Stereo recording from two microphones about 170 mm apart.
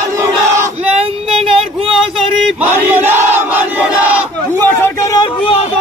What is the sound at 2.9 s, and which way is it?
Crowd, 10° right (ahead or behind).